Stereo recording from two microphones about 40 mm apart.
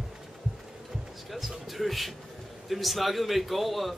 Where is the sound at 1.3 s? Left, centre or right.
Centre.